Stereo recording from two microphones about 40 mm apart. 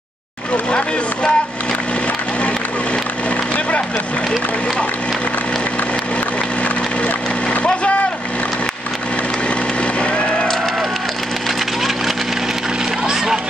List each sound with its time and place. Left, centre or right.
0.7 s speech: left
6.6 s wood: left
9.9 s vehicle: left
13.0 s a sound: centre